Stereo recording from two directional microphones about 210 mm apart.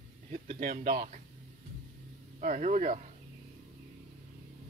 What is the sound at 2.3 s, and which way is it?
Speech, 35° right (ahead or behind).